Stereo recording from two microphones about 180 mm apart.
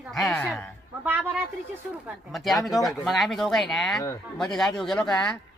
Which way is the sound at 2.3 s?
Centre (ahead or behind).